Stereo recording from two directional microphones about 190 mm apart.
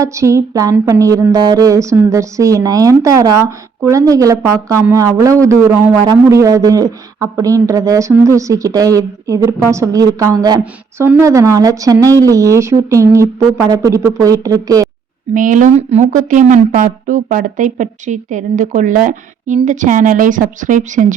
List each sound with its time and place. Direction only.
0.0 s speech: 15° right (ahead or behind)
10.6 s speech: 10° right (ahead or behind)
15.4 s a woman's voice: 45° right (ahead or behind)